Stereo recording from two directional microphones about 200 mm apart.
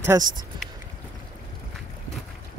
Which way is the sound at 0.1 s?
20° right (ahead or behind).